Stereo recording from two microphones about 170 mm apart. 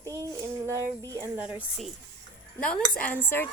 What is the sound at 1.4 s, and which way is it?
Speech, 10° right (ahead or behind).